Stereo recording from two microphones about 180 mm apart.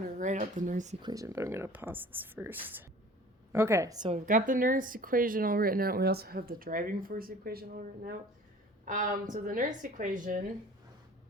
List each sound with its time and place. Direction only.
0.2 s speech: 45° right (ahead or behind)
1.0 s speech: 20° right (ahead or behind)
4.1 s speech: 45° right (ahead or behind)